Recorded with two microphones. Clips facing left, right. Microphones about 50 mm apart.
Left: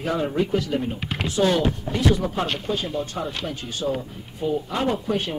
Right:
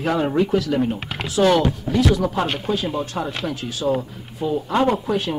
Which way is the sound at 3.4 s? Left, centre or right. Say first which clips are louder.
Right 3 dB; right.